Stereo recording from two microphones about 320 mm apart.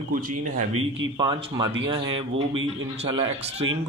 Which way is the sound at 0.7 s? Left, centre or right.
Right.